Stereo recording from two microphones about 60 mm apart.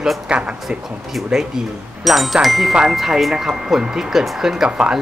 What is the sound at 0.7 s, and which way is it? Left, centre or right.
Speech, centre.